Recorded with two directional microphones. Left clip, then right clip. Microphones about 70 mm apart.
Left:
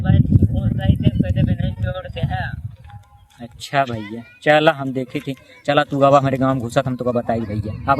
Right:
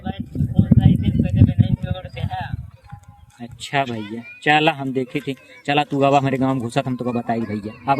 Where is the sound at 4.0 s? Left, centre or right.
Left.